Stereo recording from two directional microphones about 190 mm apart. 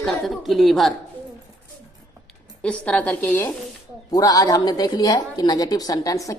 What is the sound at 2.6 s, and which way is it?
A woman's voice, 5° left (ahead or behind).